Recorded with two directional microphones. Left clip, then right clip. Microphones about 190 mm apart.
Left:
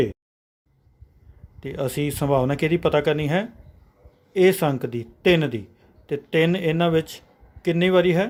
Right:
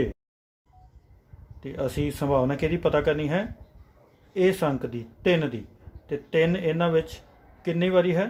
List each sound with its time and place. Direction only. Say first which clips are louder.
1.6 s speech: left 3 dB; 45° left (ahead or behind)